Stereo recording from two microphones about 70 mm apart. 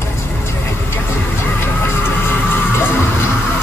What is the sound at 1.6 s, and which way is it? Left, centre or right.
Music, left.